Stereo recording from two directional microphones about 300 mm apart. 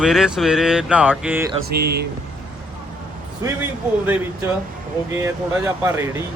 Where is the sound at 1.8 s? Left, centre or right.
Right.